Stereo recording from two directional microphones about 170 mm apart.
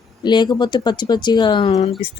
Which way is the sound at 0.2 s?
25° left (ahead or behind).